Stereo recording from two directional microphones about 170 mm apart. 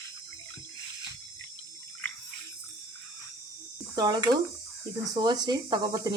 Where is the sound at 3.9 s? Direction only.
25° right (ahead or behind).